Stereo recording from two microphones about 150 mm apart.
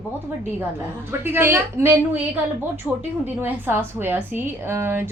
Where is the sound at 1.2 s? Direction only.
15° right (ahead or behind).